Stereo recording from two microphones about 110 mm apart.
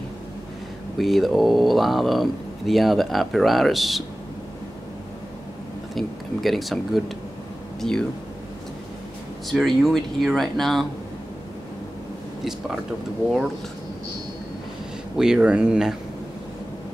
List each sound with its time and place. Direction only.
0.9 s speech: centre (ahead or behind)
5.9 s speech: centre (ahead or behind)
9.5 s speech: centre (ahead or behind)
15.1 s speech: 5° right (ahead or behind)